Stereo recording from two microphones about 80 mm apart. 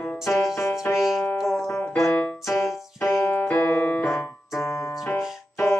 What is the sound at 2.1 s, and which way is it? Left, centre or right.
Keyboard, centre.